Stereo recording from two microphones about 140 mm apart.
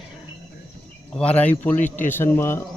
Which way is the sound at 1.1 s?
10° left (ahead or behind).